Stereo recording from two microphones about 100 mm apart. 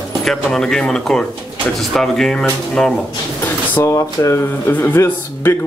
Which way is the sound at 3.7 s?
30° left (ahead or behind).